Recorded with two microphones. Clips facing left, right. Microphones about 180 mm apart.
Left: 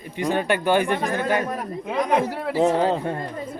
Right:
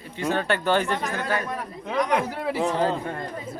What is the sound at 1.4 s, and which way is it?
Speech, 45° left (ahead or behind).